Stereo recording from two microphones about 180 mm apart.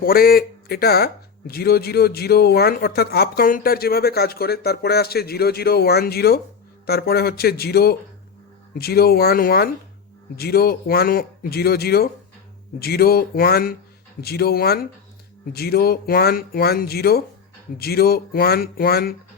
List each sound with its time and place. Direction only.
0.0 s speech: 55° left (ahead or behind)